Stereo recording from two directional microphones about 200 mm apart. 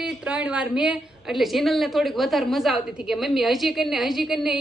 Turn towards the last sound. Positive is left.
turn(degrees=0)  # may be behind; listen again after turning